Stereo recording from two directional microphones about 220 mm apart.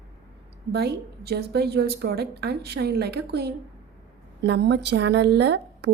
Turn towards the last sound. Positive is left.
turn(degrees=-50)  # may be behind; listen again after turning